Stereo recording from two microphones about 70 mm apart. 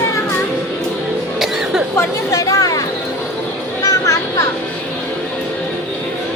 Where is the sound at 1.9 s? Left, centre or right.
Left.